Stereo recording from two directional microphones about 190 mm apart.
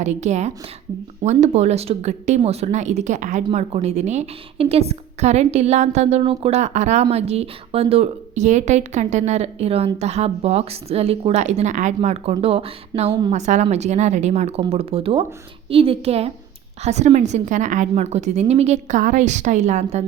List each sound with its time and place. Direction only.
0.0 s a woman's voice: 35° right (ahead or behind)